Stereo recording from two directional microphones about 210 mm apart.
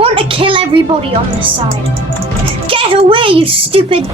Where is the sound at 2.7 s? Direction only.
25° right (ahead or behind).